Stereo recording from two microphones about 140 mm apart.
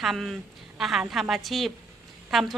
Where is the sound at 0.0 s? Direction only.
Centre (ahead or behind).